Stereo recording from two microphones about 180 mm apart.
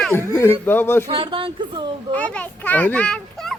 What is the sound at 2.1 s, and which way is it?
A child's voice, 10° left (ahead or behind).